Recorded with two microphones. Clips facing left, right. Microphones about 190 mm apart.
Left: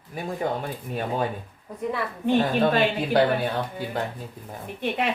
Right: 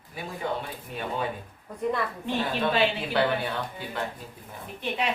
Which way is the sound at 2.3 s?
45° left (ahead or behind).